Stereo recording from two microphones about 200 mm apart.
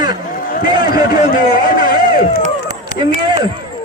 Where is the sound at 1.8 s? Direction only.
45° left (ahead or behind).